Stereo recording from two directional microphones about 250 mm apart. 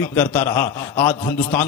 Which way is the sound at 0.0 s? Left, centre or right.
Centre.